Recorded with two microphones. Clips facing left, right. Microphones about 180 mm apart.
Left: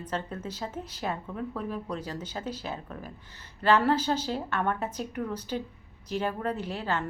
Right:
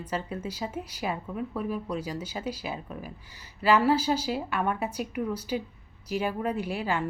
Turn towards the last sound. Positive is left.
turn(degrees=-10)  # may be behind; listen again after turning